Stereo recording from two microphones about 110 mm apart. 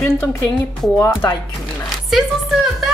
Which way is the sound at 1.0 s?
25° left (ahead or behind).